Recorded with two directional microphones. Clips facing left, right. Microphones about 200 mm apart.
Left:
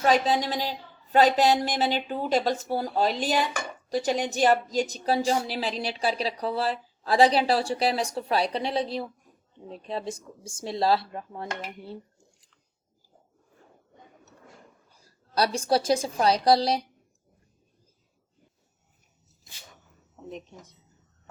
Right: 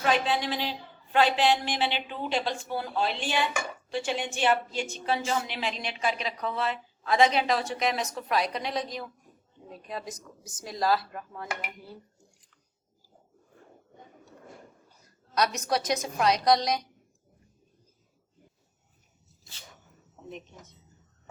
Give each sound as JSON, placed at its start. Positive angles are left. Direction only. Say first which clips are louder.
{"t": 0.0, "sound": "a woman's voice", "louder": "left 4 dB", "side_deg": 40}
{"t": 15.0, "sound": "a woman's voice", "louder": "left 2 dB", "side_deg": 30}